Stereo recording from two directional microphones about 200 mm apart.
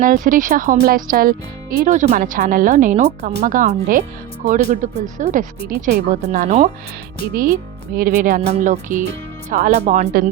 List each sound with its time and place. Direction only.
0.0 s speech: 40° right (ahead or behind)
1.8 s speech: 35° right (ahead or behind)